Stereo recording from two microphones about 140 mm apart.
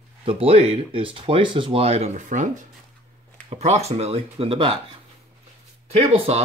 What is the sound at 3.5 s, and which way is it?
Speech, 50° right (ahead or behind).